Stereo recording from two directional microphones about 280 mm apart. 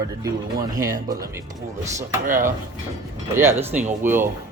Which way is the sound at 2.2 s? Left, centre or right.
Right.